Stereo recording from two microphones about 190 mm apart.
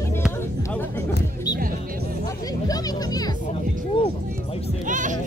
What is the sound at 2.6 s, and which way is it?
Speech, 20° left (ahead or behind).